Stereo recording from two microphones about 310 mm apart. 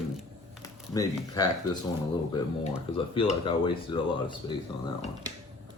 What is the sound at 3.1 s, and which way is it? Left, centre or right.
Speech, centre.